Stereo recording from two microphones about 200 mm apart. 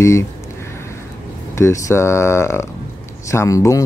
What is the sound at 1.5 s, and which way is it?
Speech, 15° left (ahead or behind).